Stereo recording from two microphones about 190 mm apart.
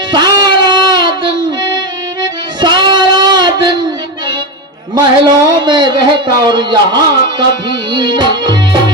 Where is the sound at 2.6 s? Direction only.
25° right (ahead or behind).